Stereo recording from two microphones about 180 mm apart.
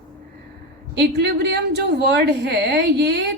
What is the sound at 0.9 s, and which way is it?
A woman's voice, 70° right (ahead or behind).